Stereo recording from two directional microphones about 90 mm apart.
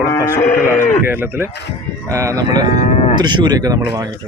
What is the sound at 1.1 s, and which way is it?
Speech, 20° right (ahead or behind).